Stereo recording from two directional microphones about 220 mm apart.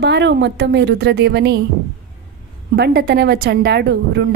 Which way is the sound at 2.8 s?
45° right (ahead or behind).